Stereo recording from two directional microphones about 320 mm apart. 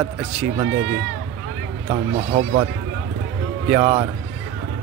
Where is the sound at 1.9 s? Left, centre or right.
Centre.